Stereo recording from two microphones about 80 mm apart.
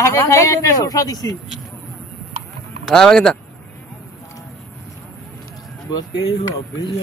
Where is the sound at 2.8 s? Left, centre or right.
Centre.